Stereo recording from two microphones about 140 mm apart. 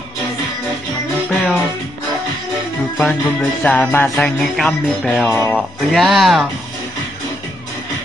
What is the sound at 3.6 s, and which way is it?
Music, 10° left (ahead or behind).